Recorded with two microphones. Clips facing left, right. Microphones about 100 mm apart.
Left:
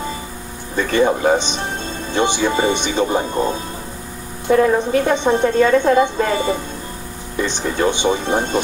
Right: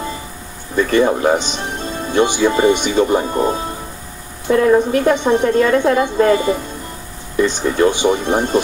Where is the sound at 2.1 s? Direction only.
25° left (ahead or behind).